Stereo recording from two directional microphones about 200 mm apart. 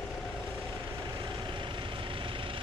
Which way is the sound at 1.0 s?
20° right (ahead or behind).